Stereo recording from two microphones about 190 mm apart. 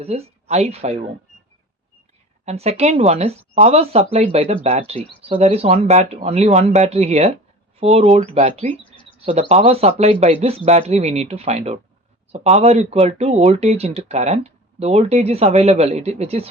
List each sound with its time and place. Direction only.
0.0 s speech: 35° right (ahead or behind)
2.4 s speech: 35° right (ahead or behind)
8.8 s bird: 25° left (ahead or behind)
9.2 s speech: 35° right (ahead or behind)